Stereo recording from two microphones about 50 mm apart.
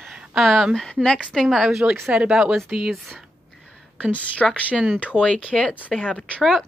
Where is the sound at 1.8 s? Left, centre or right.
Right.